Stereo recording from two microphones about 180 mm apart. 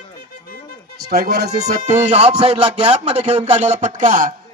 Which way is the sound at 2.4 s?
35° right (ahead or behind).